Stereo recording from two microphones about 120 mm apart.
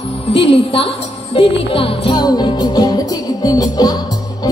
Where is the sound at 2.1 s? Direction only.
35° left (ahead or behind).